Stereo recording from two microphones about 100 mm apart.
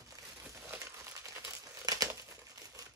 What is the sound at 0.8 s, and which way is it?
Crumpling, 30° right (ahead or behind).